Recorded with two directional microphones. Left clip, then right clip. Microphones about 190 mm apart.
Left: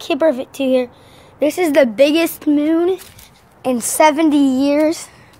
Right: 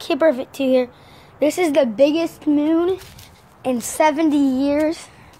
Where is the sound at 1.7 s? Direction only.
35° left (ahead or behind).